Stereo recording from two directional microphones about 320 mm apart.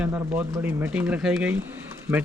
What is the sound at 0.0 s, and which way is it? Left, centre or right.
A man's voice, centre.